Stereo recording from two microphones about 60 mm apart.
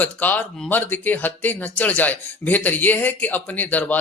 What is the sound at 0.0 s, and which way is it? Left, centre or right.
Speech, left.